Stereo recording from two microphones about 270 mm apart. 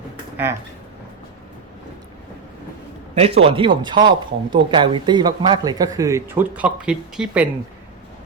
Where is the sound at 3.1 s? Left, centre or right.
Right.